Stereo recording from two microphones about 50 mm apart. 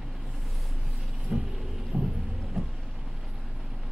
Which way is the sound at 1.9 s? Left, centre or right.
Right.